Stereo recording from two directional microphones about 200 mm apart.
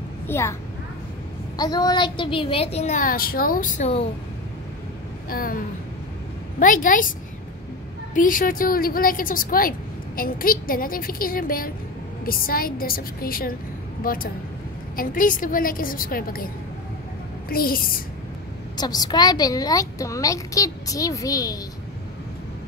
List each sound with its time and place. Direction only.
0.3 s a woman's voice: 15° left (ahead or behind)
1.6 s a woman's voice: 20° left (ahead or behind)
5.3 s a woman's voice: 45° left (ahead or behind)
6.6 s a woman's voice: 40° left (ahead or behind)
17.5 s a woman's voice: 45° left (ahead or behind)
18.8 s a woman's voice: 20° left (ahead or behind)